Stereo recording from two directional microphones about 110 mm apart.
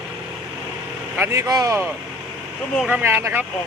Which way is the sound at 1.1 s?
25° right (ahead or behind).